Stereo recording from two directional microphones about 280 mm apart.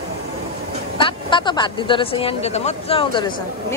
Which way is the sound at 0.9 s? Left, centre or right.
Centre.